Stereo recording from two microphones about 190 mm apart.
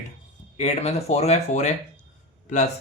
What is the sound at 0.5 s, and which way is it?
Speech, 35° left (ahead or behind).